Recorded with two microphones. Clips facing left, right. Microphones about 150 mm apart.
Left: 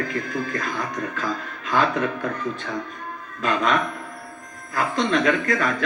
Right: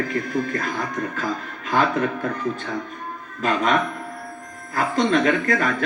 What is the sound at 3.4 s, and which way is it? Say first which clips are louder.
Speech: right 1 dB; 45° right (ahead or behind).